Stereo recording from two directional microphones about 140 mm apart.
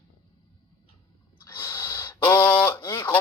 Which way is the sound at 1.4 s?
20° left (ahead or behind).